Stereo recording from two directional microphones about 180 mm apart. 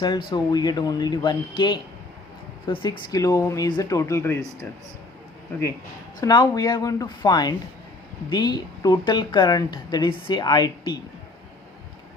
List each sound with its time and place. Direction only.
0.3 s a woman's voice: 25° left (ahead or behind)
6.1 s a woman's voice: 20° left (ahead or behind)